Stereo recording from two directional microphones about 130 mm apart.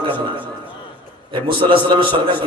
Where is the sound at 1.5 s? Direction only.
40° right (ahead or behind).